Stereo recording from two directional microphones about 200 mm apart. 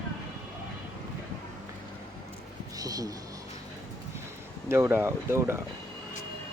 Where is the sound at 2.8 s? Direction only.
20° right (ahead or behind).